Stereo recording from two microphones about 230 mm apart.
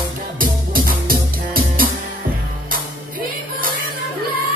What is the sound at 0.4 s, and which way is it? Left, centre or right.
Music, right.